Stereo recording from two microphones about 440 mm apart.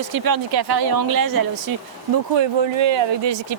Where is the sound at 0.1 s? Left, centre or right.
Right.